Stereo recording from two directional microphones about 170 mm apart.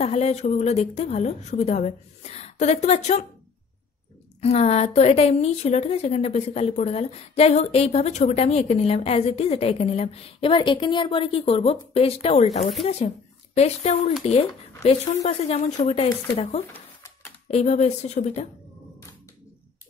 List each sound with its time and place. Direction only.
0.0 s a woman's voice: 40° left (ahead or behind)
4.4 s a woman's voice: 40° left (ahead or behind)
13.6 s a woman's voice: 40° left (ahead or behind)